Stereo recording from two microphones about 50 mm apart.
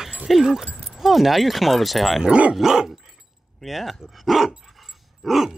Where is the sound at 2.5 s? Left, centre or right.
Centre.